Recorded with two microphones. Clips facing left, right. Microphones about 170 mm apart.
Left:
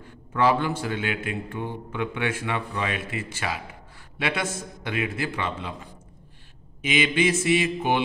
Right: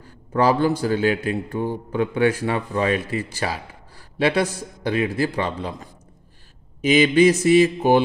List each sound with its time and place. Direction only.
0.0 s a man's voice: 35° right (ahead or behind)